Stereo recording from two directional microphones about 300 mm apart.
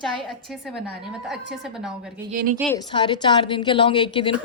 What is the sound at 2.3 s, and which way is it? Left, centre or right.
Speech, right.